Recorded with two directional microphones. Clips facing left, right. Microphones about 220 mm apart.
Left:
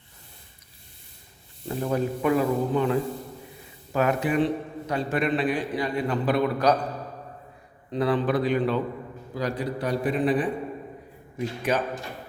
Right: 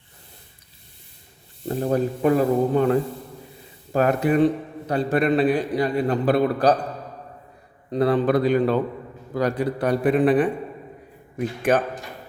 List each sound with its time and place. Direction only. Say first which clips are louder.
1.6 s a man's voice: right 4 dB; 40° right (ahead or behind)
7.9 s a man's voice: right 4 dB; 40° right (ahead or behind)
9.3 s a man's voice: right 6 dB; 55° right (ahead or behind)